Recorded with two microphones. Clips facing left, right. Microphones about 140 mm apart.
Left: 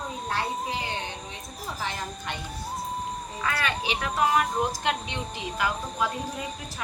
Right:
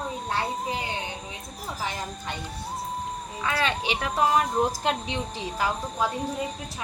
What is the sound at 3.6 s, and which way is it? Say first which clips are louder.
Speech: right 2 dB; 30° right (ahead or behind).